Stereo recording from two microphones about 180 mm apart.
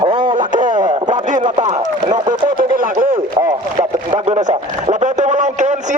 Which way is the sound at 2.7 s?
50° right (ahead or behind).